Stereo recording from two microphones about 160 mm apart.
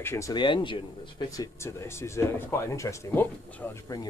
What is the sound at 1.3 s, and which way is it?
Speech, 20° left (ahead or behind).